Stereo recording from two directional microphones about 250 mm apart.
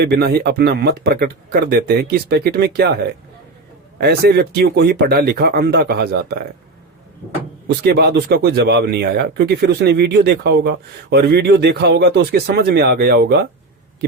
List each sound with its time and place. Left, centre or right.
0.0 s speech: right
7.9 s speech: right